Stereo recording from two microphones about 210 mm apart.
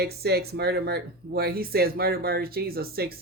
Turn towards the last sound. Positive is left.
turn(degrees=-45)  # may be behind; listen again after turning